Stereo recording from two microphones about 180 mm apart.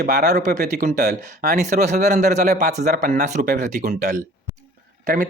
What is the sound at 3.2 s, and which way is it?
Speech, 40° right (ahead or behind).